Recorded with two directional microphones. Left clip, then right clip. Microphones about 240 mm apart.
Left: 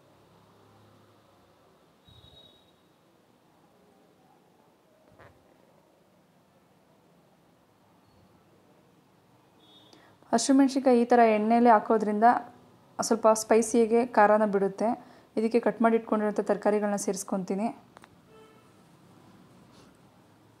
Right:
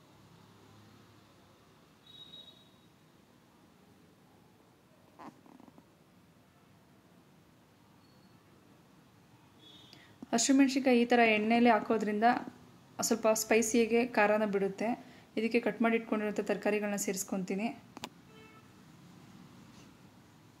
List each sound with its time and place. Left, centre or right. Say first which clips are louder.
9.8 s a woman's voice: left 7 dB; centre